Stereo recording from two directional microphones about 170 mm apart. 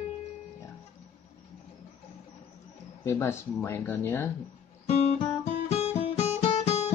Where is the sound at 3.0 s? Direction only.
15° left (ahead or behind).